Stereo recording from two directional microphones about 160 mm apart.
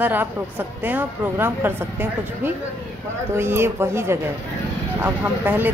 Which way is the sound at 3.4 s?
15° right (ahead or behind).